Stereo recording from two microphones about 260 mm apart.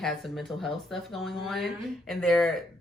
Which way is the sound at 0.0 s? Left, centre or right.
Centre.